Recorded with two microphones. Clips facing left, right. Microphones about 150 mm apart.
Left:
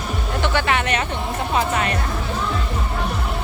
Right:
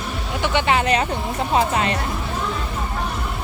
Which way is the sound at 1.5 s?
25° right (ahead or behind).